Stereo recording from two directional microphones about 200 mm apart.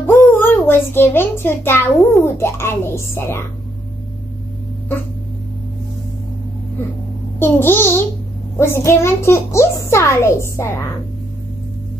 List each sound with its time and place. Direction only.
0.0 s a child's voice: 10° left (ahead or behind)
7.3 s a child's voice: 10° left (ahead or behind)